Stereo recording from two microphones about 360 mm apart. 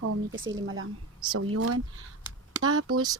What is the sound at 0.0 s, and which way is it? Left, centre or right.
Speech, right.